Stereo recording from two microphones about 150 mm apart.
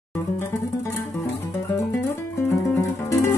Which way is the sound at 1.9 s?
20° left (ahead or behind).